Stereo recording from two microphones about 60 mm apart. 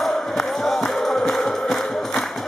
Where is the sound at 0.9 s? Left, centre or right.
Centre.